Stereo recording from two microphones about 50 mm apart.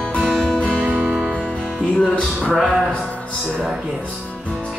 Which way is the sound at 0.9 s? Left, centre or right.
Centre.